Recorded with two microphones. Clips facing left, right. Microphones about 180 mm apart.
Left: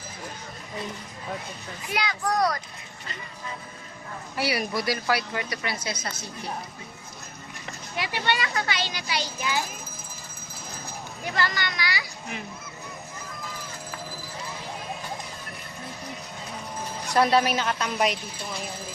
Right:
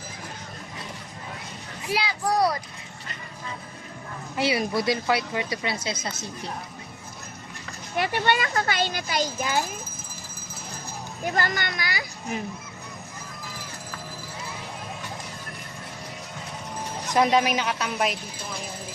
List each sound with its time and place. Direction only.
2.2 s a woman's voice: 30° right (ahead or behind)
4.4 s a woman's voice: 20° right (ahead or behind)
7.9 s a child's voice: 50° right (ahead or behind)
11.3 s a child's voice: 50° right (ahead or behind)
17.1 s a woman's voice: 15° right (ahead or behind)